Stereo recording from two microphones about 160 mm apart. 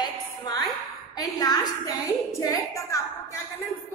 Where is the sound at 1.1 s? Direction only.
25° left (ahead or behind).